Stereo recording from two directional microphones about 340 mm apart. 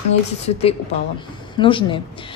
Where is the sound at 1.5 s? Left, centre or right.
Centre.